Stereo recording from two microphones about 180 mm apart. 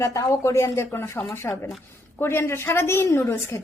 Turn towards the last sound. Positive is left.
turn(degrees=15)  # may be behind; listen again after turning